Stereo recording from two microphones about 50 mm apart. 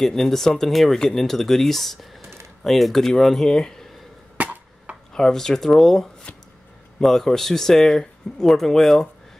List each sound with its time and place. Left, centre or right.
0.0 s speech: centre
4.4 s a sound: right
5.1 s speech: centre